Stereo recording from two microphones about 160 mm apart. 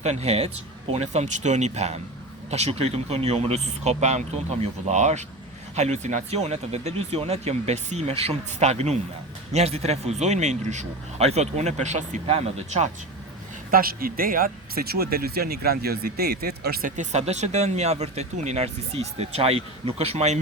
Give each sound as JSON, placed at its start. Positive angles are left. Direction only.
{"t": 0.0, "sound": "speech", "side_deg": -45}
{"t": 13.7, "sound": "speech", "side_deg": -65}
{"t": 17.0, "sound": "speech", "side_deg": -45}